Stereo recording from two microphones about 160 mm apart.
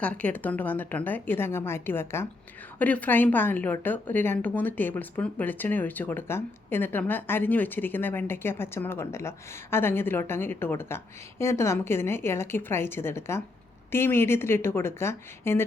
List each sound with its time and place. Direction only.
0.0 s a woman's voice: 10° left (ahead or behind)